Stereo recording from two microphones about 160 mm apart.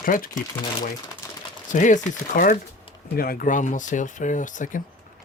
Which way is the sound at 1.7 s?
50° left (ahead or behind).